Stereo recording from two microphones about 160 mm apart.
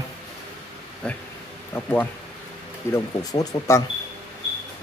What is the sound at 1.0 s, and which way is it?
Speech, 5° left (ahead or behind).